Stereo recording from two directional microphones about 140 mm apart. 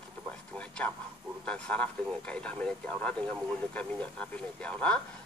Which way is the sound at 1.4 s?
10° left (ahead or behind).